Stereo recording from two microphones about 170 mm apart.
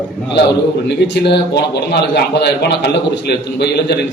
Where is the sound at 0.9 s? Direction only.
80° left.